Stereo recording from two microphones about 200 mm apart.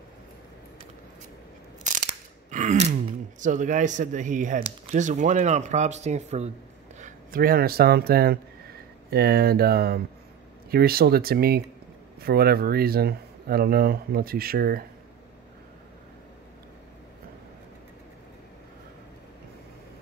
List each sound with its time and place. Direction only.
2.5 s speech: 40° right (ahead or behind)